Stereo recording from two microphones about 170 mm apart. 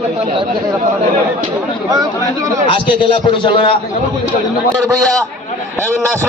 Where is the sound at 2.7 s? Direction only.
30° left (ahead or behind).